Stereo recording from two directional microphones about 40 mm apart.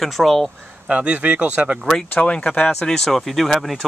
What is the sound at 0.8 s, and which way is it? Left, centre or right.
Speech, right.